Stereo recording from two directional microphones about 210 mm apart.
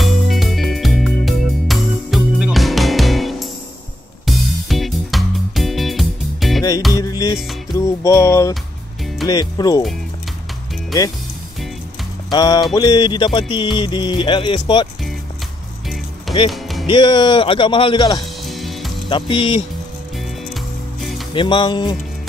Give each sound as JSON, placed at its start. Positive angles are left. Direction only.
{"t": 0.0, "sound": "music", "side_deg": 0}
{"t": 6.9, "sound": "music", "side_deg": 15}
{"t": 9.3, "sound": "a man's voice", "side_deg": 20}
{"t": 12.3, "sound": "a man's voice", "side_deg": 20}
{"t": 16.3, "sound": "music", "side_deg": 0}
{"t": 16.8, "sound": "a man's voice", "side_deg": 20}
{"t": 18.4, "sound": "music", "side_deg": 0}
{"t": 19.0, "sound": "a man's voice", "side_deg": 25}
{"t": 21.3, "sound": "a man's voice", "side_deg": 25}